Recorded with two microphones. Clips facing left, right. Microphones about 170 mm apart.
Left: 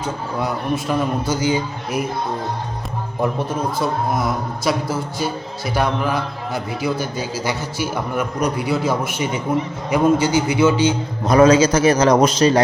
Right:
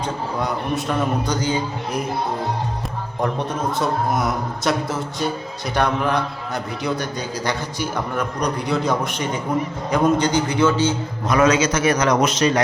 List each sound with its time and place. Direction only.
0.0 s a man's voice: 5° left (ahead or behind)
3.2 s a man's voice: centre (ahead or behind)
11.3 s a man's voice: 30° left (ahead or behind)